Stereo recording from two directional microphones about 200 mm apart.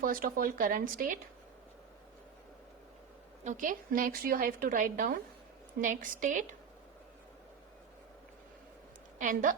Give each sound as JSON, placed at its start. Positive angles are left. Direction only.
{"t": 0.0, "sound": "a woman's voice", "side_deg": -45}
{"t": 3.4, "sound": "a woman's voice", "side_deg": -40}
{"t": 9.1, "sound": "a woman's voice", "side_deg": -40}